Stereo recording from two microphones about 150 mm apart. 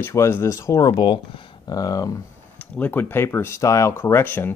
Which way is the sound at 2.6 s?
10° left (ahead or behind).